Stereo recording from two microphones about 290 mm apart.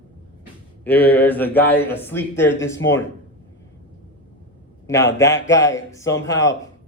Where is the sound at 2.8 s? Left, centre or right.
Left.